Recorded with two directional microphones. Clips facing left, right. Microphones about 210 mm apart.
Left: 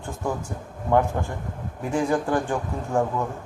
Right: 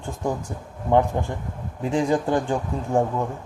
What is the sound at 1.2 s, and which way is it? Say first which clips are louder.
Speech: right 2 dB; 25° right (ahead or behind).